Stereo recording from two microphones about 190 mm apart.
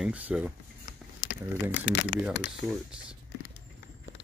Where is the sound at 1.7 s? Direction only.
70° left (ahead or behind).